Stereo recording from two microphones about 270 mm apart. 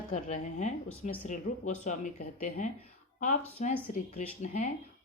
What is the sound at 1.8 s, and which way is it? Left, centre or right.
Speech, left.